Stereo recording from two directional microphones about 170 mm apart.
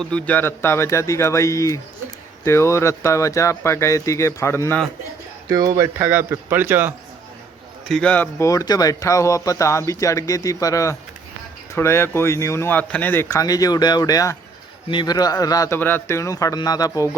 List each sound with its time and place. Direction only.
0.0 s speech: 5° left (ahead or behind)
5.5 s speech: 20° right (ahead or behind)
7.9 s speech: 5° left (ahead or behind); by 17.1 s 20° left (ahead or behind)